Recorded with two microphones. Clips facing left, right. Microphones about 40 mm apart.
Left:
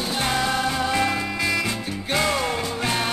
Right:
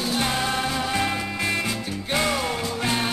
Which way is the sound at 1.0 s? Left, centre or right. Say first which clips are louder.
Left 2 dB; left.